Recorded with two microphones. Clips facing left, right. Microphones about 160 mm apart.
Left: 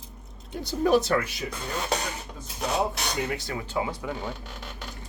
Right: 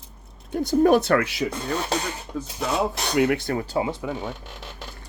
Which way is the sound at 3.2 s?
60° right (ahead or behind).